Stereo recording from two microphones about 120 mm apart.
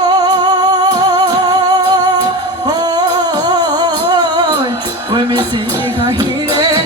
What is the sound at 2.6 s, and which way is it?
Humming, 35° right (ahead or behind).